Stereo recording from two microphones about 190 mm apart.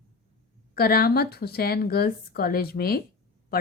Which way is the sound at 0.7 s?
55° left (ahead or behind).